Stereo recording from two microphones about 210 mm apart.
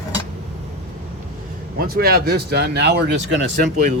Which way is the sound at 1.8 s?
45° right (ahead or behind).